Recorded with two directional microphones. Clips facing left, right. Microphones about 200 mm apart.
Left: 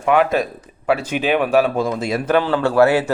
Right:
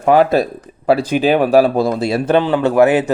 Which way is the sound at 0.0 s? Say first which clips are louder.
Right 4 dB; 35° right (ahead or behind).